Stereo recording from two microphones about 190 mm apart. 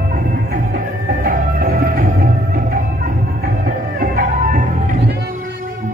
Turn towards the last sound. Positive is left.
turn(degrees=-45)  # may be behind; listen again after turning